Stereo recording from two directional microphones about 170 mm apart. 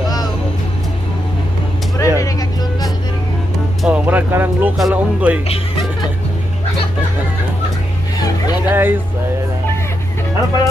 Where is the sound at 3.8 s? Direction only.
10° right (ahead or behind).